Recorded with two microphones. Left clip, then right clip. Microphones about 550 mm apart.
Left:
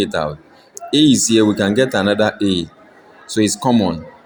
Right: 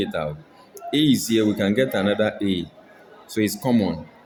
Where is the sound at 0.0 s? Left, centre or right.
Right.